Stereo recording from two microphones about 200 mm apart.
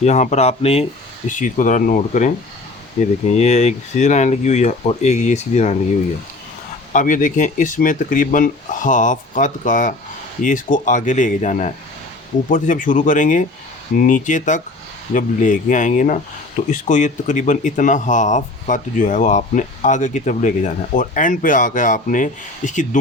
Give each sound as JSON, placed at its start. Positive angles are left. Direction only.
{"t": 0.0, "sound": "speech", "side_deg": 35}
{"t": 6.9, "sound": "speech", "side_deg": 40}